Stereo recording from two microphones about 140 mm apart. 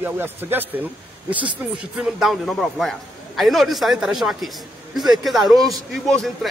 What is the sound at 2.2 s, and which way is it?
A man's voice, centre (ahead or behind).